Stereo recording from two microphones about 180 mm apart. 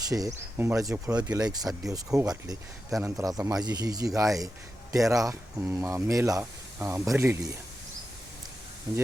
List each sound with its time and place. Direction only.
0.1 s speech: 20° right (ahead or behind)
8.9 s speech: 20° right (ahead or behind)